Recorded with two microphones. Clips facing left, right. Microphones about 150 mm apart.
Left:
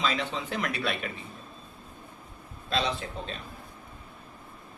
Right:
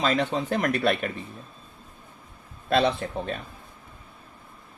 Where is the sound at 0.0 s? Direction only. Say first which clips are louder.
Right 6 dB; 50° right (ahead or behind).